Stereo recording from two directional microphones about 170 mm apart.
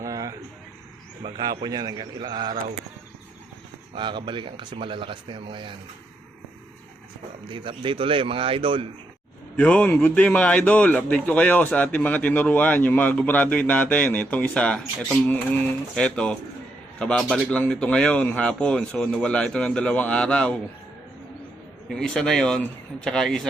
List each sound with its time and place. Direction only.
0.0 s a sound: 20° right (ahead or behind)
1.2 s speech: 25° right (ahead or behind)
3.9 s speech: 30° right (ahead or behind)
7.5 s speech: 30° right (ahead or behind)
9.6 s a man's voice: 10° left (ahead or behind)
21.8 s speech: 5° left (ahead or behind)